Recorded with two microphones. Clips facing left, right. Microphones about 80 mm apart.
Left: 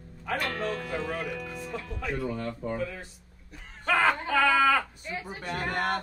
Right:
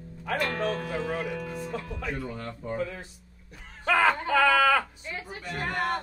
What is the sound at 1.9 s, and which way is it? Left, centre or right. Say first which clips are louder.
A man's voice: left 2 dB; centre.